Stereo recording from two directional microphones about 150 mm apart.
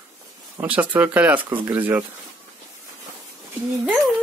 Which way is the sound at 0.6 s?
10° right (ahead or behind).